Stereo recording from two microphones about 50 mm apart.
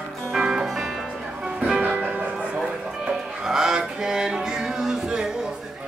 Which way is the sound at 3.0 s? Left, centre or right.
Centre.